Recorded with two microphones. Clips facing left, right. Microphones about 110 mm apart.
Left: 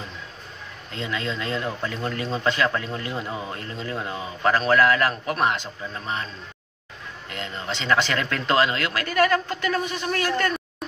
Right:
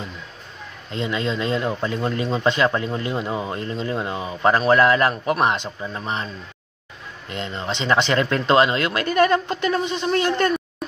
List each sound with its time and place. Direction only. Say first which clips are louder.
0.9 s speech: right 5 dB; 20° right (ahead or behind)
7.2 s speech: right 4 dB; 25° right (ahead or behind)